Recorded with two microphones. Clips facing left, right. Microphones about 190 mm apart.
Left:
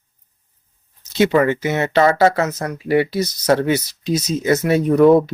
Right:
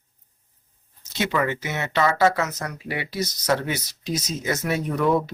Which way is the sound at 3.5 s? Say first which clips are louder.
Left 9 dB; 30° left (ahead or behind).